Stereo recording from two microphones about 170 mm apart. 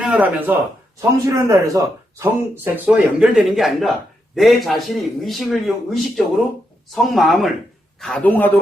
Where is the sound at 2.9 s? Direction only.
Centre (ahead or behind).